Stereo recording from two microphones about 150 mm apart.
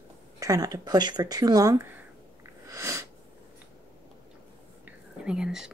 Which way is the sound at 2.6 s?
20° right (ahead or behind).